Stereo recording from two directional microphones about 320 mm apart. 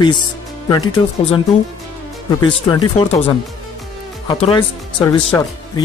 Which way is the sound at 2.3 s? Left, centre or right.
Centre.